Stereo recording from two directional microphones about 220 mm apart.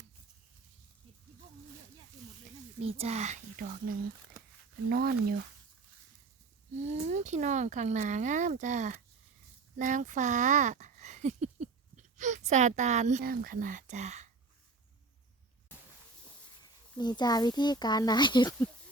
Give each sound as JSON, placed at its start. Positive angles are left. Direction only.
{"t": 2.8, "sound": "speech", "side_deg": -30}
{"t": 6.8, "sound": "speech", "side_deg": -30}
{"t": 17.0, "sound": "a child's voice", "side_deg": 20}